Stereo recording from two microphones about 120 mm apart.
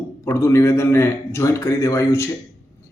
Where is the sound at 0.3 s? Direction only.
25° left (ahead or behind).